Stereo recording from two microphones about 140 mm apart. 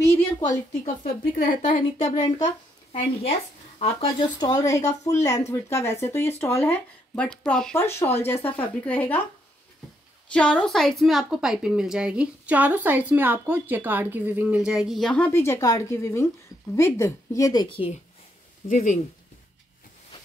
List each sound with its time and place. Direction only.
0.8 s speech: 75° left (ahead or behind)
1.6 s a woman's voice: 55° left (ahead or behind)
2.9 s speech: 45° left (ahead or behind)
4.5 s a woman's voice: 25° left (ahead or behind)
7.2 s speech: 5° left (ahead or behind)
7.7 s speech: 15° left (ahead or behind)
10.3 s a woman's voice: 5° left (ahead or behind); by 17.7 s 25° left (ahead or behind)
18.7 s speech: 70° left (ahead or behind)